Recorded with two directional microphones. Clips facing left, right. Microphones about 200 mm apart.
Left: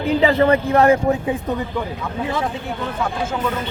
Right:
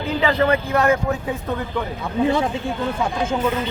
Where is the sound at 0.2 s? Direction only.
30° left (ahead or behind).